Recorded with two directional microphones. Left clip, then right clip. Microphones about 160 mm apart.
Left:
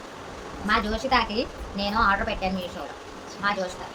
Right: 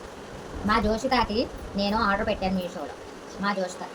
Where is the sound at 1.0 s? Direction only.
Centre (ahead or behind).